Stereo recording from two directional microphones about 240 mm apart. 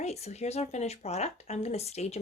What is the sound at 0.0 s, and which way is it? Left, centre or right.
Speech, left.